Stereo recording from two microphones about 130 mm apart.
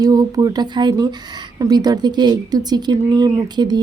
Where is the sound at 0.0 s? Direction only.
30° right (ahead or behind).